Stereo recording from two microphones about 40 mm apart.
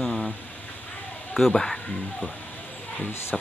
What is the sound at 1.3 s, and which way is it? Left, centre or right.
Speech, centre.